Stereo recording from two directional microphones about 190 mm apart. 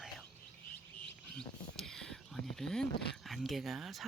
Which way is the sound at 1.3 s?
5° left (ahead or behind).